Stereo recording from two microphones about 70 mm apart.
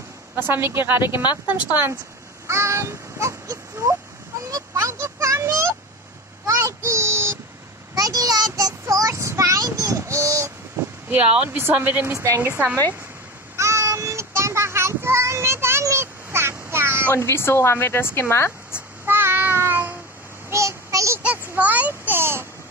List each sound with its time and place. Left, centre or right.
0.4 s a woman's voice: right
2.4 s baby cry: right
4.3 s a sound: right
6.4 s child singing: right
7.9 s child singing: right
11.1 s speech: right
12.1 s a woman's voice: right
13.6 s child singing: right
17.1 s a woman's voice: left
19.0 s child singing: right
20.4 s child singing: right
21.2 s a sound: right